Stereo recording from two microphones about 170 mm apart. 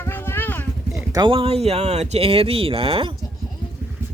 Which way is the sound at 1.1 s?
30° right (ahead or behind).